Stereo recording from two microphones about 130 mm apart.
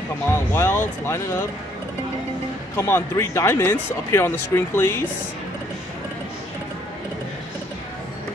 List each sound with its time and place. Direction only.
0.3 s speech: 20° left (ahead or behind)
2.8 s speech: 20° left (ahead or behind)